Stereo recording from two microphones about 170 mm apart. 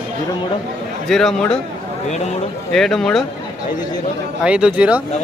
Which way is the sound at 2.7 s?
Centre (ahead or behind).